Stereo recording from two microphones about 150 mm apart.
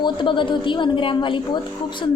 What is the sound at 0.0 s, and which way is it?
A woman's voice, 35° left (ahead or behind).